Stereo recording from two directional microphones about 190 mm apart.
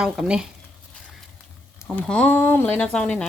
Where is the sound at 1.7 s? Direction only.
10° left (ahead or behind).